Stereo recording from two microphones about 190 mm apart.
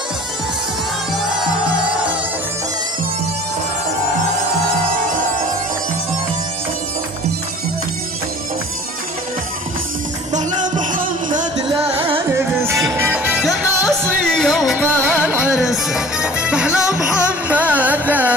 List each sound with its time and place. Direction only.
10.3 s music: 40° right (ahead or behind)
11.5 s music: 25° right (ahead or behind)
12.3 s music: 15° right (ahead or behind)